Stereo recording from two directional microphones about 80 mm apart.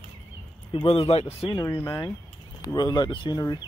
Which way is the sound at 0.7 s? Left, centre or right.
Left.